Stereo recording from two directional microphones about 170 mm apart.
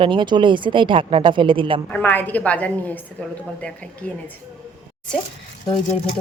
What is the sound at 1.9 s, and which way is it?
Speech, 10° left (ahead or behind).